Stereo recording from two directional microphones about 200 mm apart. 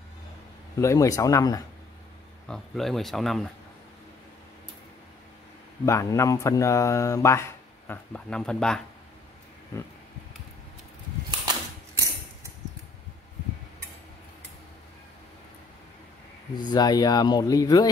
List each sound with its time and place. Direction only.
0.7 s speech: 15° left (ahead or behind)
2.4 s speech: centre (ahead or behind)
5.9 s speech: 15° left (ahead or behind)
11.2 s typewriter: 20° right (ahead or behind)
16.5 s speech: 20° left (ahead or behind)